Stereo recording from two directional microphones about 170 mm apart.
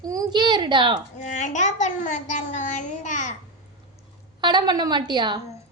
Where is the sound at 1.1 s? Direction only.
45° left (ahead or behind).